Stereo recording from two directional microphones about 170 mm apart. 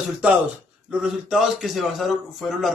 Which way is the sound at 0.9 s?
5° right (ahead or behind).